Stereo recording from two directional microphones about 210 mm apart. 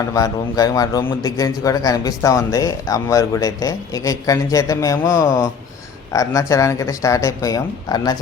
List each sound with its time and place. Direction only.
0.1 s a man's voice: 15° left (ahead or behind)